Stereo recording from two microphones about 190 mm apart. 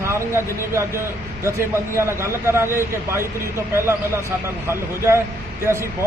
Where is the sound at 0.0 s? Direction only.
15° right (ahead or behind).